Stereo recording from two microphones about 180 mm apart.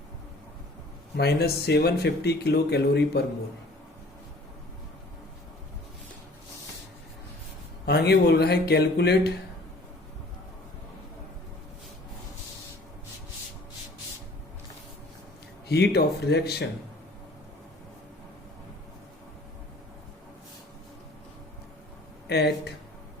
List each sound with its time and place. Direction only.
1.1 s speech: 65° left (ahead or behind)
7.9 s speech: 65° left (ahead or behind)
15.7 s speech: 65° left (ahead or behind)
22.3 s speech: 65° left (ahead or behind)